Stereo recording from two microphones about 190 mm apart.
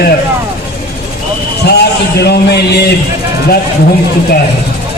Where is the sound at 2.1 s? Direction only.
60° left (ahead or behind).